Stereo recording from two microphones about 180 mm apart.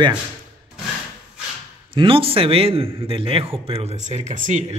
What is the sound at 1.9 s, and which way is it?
Speech, 30° right (ahead or behind).